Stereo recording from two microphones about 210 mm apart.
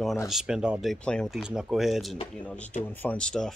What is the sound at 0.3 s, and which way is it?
Speech, 5° right (ahead or behind).